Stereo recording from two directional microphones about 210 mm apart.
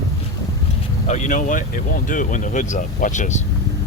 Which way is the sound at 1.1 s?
35° left (ahead or behind).